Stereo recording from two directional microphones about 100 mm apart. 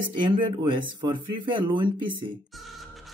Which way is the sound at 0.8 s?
55° right (ahead or behind).